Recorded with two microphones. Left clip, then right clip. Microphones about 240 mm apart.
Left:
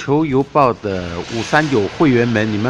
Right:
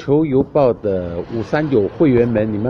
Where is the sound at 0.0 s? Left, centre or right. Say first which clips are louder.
Right 1 dB; left.